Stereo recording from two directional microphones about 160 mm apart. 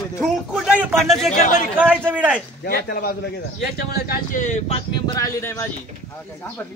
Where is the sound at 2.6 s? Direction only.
70° left (ahead or behind); by 4.8 s 50° left (ahead or behind).